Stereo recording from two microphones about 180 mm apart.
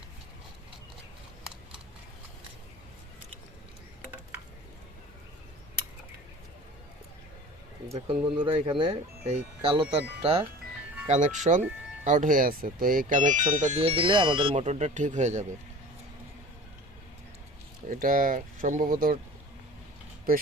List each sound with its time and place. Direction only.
7.9 s speech: 30° right (ahead or behind)
11.1 s speech: 45° right (ahead or behind)
17.8 s speech: 50° right (ahead or behind)